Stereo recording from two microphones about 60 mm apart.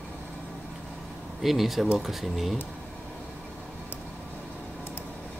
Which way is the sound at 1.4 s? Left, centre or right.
Centre.